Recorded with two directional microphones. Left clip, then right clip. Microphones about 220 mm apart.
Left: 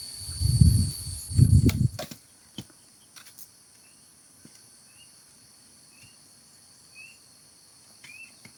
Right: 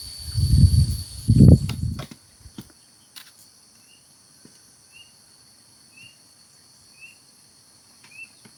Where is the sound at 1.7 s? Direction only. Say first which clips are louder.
Left 9 dB; 45° left (ahead or behind).